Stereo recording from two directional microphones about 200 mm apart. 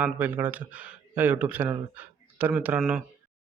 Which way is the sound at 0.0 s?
10° right (ahead or behind).